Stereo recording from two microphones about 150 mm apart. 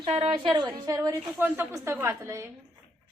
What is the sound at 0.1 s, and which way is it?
Speech, 45° right (ahead or behind).